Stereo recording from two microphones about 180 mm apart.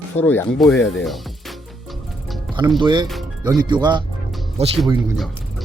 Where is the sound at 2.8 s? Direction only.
25° right (ahead or behind).